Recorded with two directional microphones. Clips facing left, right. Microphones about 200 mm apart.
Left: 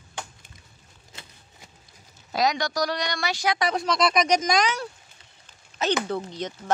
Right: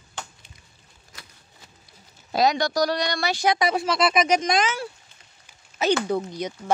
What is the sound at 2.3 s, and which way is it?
Speech, 30° right (ahead or behind).